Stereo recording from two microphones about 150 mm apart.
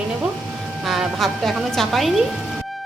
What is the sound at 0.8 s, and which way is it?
A woman's voice, centre (ahead or behind).